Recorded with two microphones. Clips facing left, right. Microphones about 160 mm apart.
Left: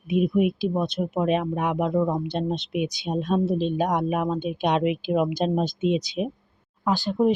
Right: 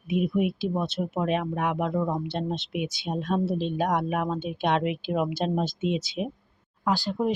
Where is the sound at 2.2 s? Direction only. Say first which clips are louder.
Left 3 dB; 20° left (ahead or behind).